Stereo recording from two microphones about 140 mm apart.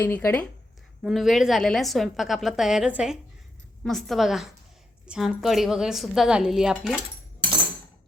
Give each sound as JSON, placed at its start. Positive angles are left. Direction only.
{"t": 0.0, "sound": "speech", "side_deg": 15}
{"t": 1.0, "sound": "a woman's voice", "side_deg": 0}